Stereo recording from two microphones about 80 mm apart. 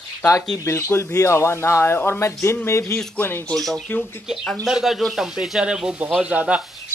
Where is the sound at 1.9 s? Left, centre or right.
Left.